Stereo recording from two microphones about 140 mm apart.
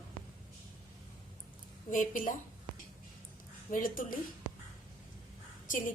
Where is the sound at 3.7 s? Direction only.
80° left.